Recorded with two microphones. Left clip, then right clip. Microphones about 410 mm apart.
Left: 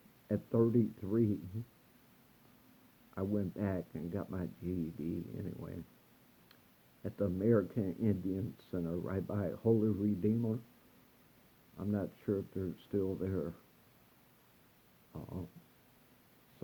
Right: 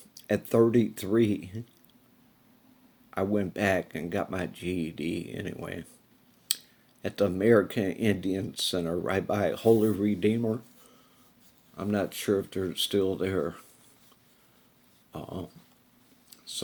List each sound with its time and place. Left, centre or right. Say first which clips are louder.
0.3 s speech: right 9 dB; right
3.2 s speech: right 10 dB; right
7.0 s speech: right 10 dB; right
11.8 s speech: right 10 dB; right
15.1 s dog: right 9 dB; right